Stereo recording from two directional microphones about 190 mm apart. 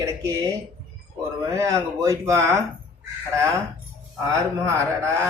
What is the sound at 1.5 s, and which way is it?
Speech, 15° right (ahead or behind).